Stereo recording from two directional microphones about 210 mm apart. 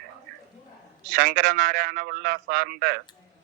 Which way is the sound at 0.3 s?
45° right (ahead or behind).